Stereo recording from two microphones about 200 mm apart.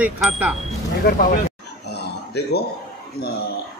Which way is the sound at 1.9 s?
55° left (ahead or behind).